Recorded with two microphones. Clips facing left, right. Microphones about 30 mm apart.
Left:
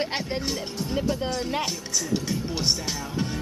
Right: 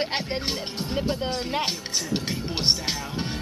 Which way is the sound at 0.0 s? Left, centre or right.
Right.